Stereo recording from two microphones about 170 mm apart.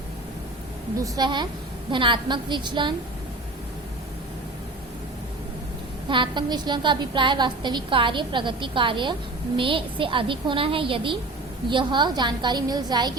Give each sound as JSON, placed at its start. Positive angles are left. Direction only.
{"t": 1.0, "sound": "a woman's voice", "side_deg": -25}
{"t": 6.1, "sound": "a woman's voice", "side_deg": -30}